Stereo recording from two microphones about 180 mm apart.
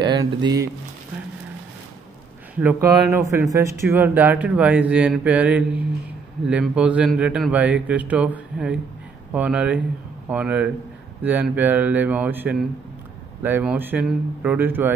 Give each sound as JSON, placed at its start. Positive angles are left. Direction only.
{"t": 0.0, "sound": "speech", "side_deg": -25}
{"t": 2.6, "sound": "speech", "side_deg": -15}